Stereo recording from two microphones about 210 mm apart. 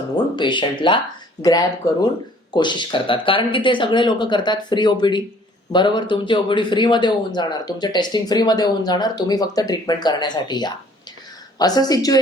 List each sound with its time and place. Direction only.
0.3 s speech: 20° left (ahead or behind)